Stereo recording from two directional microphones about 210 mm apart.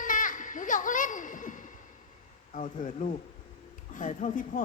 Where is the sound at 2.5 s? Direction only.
35° left (ahead or behind).